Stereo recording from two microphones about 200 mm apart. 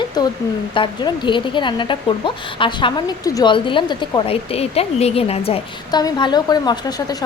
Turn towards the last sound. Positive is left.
turn(degrees=20)  # may be behind; listen again after turning